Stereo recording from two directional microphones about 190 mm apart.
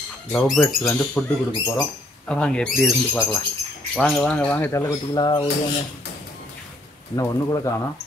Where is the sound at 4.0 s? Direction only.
5° left (ahead or behind); by 5.5 s 20° left (ahead or behind).